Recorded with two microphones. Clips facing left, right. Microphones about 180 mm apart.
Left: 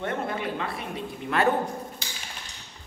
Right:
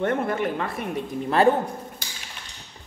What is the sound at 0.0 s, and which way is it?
Speech, 50° right (ahead or behind).